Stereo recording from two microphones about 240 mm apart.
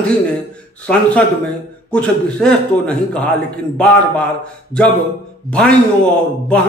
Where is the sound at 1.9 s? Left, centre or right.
Centre.